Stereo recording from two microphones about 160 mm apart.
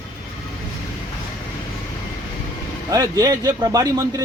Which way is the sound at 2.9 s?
20° right (ahead or behind).